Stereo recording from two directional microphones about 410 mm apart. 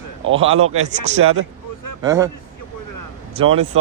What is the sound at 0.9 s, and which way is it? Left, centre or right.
A man's voice, centre.